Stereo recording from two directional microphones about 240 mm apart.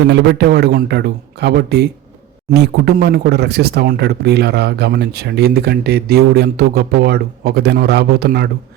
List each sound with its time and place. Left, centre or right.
0.0 s speech: right